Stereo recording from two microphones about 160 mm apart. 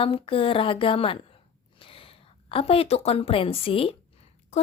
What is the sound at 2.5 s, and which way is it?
A woman's voice, 35° left (ahead or behind).